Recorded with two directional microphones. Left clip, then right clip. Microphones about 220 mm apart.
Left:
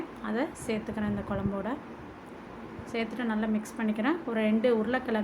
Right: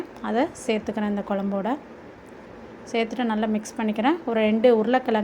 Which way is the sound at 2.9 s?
30° right (ahead or behind).